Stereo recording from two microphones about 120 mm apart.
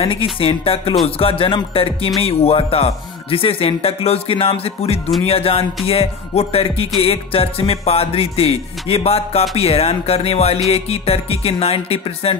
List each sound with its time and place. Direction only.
0.0 s speech: 50° left (ahead or behind)
5.2 s music: 55° left (ahead or behind)